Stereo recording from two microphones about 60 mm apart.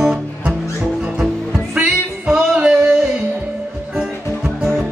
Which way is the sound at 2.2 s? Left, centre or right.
Centre.